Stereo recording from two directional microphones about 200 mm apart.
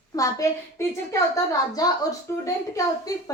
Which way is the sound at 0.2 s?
15° left (ahead or behind).